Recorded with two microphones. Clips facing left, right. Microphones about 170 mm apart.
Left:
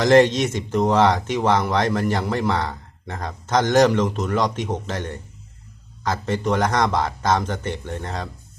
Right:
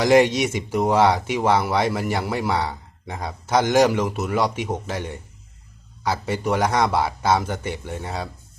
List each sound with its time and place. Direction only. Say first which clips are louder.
0.0 s speech: left 1 dB; 10° right (ahead or behind)